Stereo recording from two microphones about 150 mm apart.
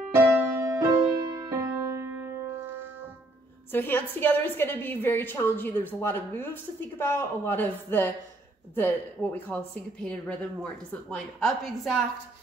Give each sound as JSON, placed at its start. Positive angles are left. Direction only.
{"t": 0.2, "sound": "music", "side_deg": -20}
{"t": 3.7, "sound": "a woman's voice", "side_deg": 15}